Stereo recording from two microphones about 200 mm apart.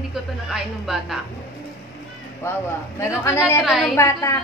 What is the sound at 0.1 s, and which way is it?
Speech, centre (ahead or behind).